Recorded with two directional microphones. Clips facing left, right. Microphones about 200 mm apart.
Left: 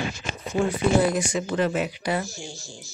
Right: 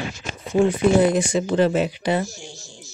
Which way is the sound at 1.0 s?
30° right (ahead or behind).